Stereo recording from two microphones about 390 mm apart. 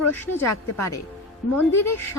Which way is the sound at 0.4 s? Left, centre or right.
Left.